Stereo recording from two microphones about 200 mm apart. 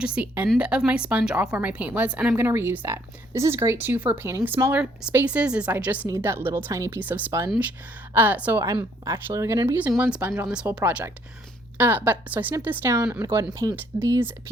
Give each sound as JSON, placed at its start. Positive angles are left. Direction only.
{"t": 0.0, "sound": "speech", "side_deg": -5}